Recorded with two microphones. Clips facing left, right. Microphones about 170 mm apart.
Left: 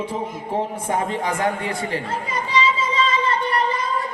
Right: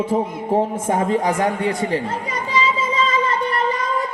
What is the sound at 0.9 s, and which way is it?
Speech, 35° right (ahead or behind).